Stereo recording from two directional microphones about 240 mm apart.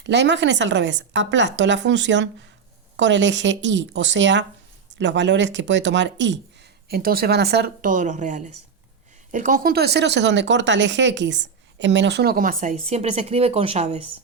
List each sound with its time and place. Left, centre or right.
0.0 s a woman's voice: right